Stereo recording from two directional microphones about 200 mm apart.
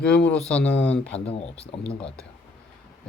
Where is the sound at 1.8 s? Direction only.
5° left (ahead or behind).